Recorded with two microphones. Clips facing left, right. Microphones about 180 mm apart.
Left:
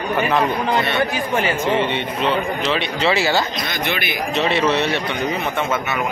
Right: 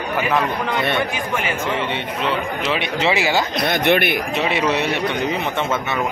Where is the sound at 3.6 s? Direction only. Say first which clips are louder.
Right 7 dB; 60° right (ahead or behind).